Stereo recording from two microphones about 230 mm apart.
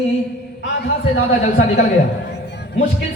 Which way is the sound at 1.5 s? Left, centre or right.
Left.